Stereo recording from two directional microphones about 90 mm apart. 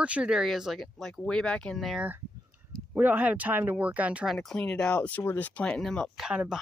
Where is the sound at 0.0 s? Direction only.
10° right (ahead or behind); by 2.0 s 5° left (ahead or behind).